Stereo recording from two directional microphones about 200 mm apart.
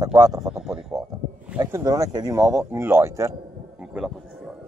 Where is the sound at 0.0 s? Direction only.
20° right (ahead or behind).